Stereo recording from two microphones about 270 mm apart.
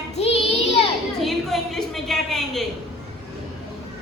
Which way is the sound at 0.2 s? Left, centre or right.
Left.